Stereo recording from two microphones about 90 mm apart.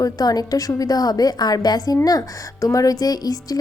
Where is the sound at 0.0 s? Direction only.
45° left (ahead or behind).